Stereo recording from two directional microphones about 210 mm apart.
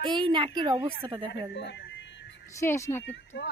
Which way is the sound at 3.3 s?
55° left (ahead or behind).